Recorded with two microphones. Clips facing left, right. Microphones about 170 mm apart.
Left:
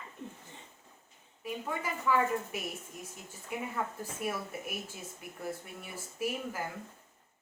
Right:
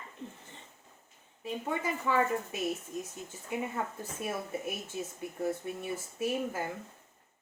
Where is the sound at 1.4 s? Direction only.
25° right (ahead or behind).